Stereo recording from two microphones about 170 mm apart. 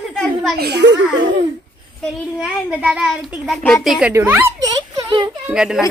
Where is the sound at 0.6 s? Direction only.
80° right.